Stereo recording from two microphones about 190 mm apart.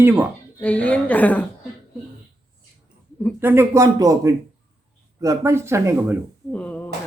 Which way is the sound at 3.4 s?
10° right (ahead or behind).